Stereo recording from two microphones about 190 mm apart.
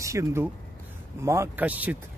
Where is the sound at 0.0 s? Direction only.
15° right (ahead or behind).